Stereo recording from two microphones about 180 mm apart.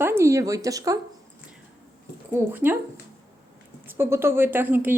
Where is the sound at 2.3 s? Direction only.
10° right (ahead or behind).